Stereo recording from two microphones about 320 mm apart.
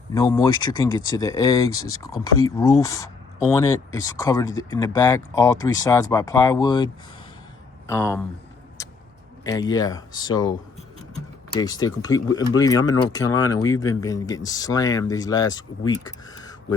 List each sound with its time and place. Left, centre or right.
0.1 s speech: centre
1.7 s speech: left
2.0 s speech: centre
4.2 s speech: centre
8.8 s a sound: centre
9.4 s speech: centre
11.6 s speech: centre